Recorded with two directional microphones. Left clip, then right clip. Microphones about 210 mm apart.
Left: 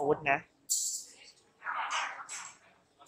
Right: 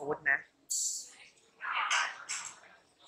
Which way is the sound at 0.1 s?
10° left (ahead or behind).